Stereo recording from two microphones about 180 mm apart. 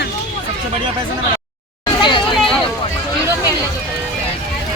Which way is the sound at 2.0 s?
25° left (ahead or behind).